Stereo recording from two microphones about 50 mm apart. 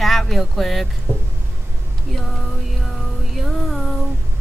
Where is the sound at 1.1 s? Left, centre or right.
Left.